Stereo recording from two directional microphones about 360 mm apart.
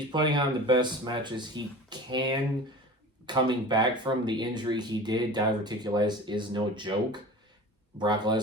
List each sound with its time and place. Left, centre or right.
0.1 s speech: centre